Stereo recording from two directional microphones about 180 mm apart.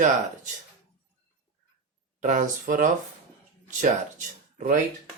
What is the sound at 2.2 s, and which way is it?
Speech, 45° right (ahead or behind).